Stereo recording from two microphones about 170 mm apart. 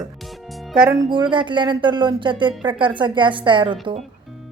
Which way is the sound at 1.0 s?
30° right (ahead or behind).